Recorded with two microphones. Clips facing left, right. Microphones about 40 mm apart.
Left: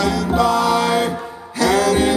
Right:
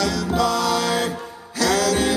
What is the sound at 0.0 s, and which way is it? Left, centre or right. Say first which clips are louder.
Music: left 4 dB; left.